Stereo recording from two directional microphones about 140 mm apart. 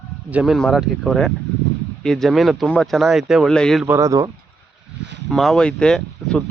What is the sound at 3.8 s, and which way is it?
Speech, 20° right (ahead or behind).